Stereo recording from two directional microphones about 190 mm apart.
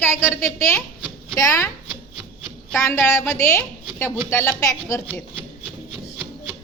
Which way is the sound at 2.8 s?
10° left (ahead or behind).